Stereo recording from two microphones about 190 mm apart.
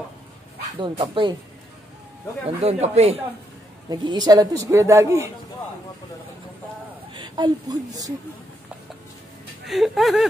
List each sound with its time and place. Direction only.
0.7 s speech: 25° right (ahead or behind)
2.6 s speech: 35° right (ahead or behind)
3.9 s speech: 20° right (ahead or behind)
7.2 s a woman's voice: 25° right (ahead or behind)
9.7 s speech: centre (ahead or behind)